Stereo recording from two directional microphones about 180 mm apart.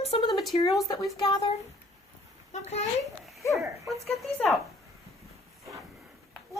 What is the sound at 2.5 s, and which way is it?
Speech, 40° left (ahead or behind).